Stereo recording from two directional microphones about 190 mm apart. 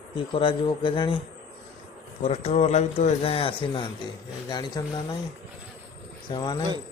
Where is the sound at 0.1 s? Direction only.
25° left (ahead or behind).